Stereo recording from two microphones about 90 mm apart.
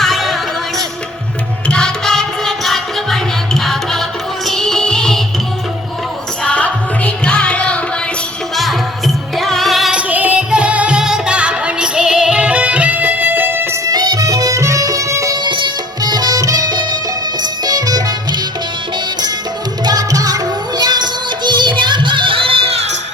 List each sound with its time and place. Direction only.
0.0 s music: centre (ahead or behind)
1.6 s music: 10° left (ahead or behind)
6.4 s music: 15° left (ahead or behind)
8.5 s music: centre (ahead or behind)
9.9 s music: 15° right (ahead or behind)
13.8 s music: 45° right (ahead or behind)
15.4 s music: 60° right (ahead or behind)
19.8 s music: 45° right (ahead or behind); by 22.7 s 90° right